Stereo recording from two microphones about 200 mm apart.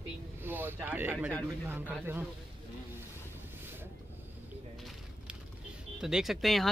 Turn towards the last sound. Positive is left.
turn(degrees=0)  # may be behind; listen again after turning